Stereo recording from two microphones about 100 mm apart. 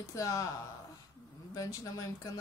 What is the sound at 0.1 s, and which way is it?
Speech, 35° left (ahead or behind).